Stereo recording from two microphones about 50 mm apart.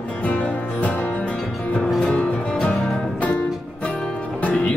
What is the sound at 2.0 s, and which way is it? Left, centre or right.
Music, left.